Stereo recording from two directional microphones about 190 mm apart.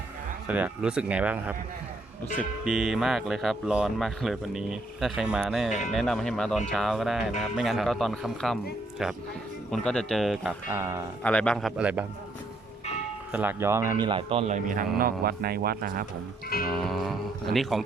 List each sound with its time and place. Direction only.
0.4 s speech: 10° right (ahead or behind)
9.7 s speech: 5° left (ahead or behind)
10.7 s speech: 15° right (ahead or behind)
11.2 s speech: 5° left (ahead or behind)
13.3 s a man's voice: 10° right (ahead or behind); by 14.8 s 40° right (ahead or behind)
15.2 s speech: 50° right (ahead or behind)
16.6 s speech: centre (ahead or behind)